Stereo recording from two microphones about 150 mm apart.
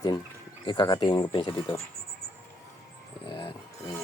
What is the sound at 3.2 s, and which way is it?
Music, 35° left (ahead or behind).